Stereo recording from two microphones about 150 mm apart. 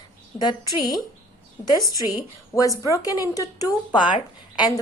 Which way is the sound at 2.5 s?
20° left (ahead or behind).